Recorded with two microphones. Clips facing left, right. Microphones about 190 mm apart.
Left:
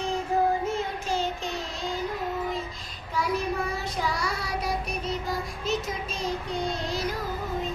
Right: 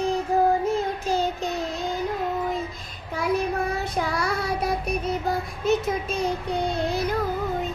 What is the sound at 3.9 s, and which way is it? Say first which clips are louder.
Child singing: right 4 dB; 55° right (ahead or behind).